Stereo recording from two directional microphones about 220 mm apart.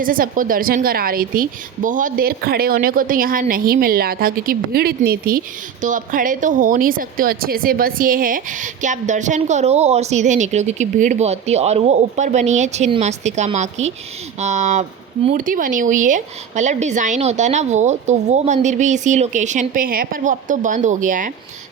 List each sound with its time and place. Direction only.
0.0 s a woman's voice: 40° right (ahead or behind)